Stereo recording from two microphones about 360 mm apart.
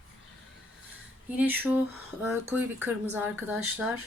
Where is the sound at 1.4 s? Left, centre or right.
Centre.